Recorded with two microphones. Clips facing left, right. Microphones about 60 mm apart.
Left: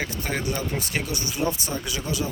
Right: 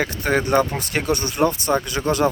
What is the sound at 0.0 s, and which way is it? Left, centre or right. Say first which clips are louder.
Speech: right 7 dB; right.